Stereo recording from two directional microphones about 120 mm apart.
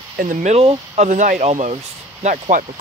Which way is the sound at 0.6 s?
65° right (ahead or behind).